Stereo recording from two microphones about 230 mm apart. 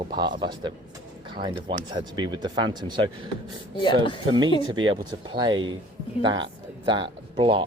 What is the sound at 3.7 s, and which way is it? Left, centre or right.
Speech, left.